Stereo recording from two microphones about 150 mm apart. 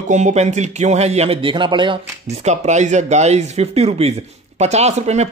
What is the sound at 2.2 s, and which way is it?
Speech, 50° right (ahead or behind).